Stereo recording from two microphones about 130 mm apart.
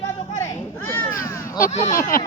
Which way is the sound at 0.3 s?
20° left (ahead or behind).